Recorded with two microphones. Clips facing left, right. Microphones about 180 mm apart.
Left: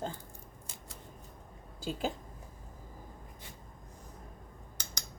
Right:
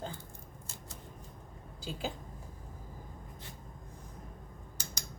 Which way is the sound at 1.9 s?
45° left (ahead or behind).